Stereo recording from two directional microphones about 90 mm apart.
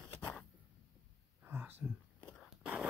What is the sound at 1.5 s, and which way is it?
Whispering, 20° right (ahead or behind).